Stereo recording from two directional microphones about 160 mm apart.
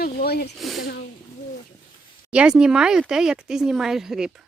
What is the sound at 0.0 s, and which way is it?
Speech, 75° left (ahead or behind).